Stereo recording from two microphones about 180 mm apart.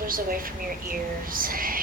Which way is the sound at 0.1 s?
50° right (ahead or behind).